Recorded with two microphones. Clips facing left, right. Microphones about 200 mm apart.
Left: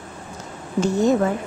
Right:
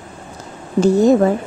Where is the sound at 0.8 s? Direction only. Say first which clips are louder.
Right 6 dB; 35° right (ahead or behind).